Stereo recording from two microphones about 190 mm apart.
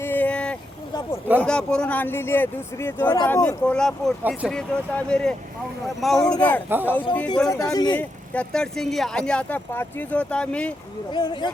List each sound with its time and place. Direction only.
0.1 s a sound: 10° left (ahead or behind)
1.4 s speech: 5° left (ahead or behind)
6.7 s speech: 10° right (ahead or behind)
7.4 s speech: 15° left (ahead or behind)
7.9 s speech: 5° left (ahead or behind)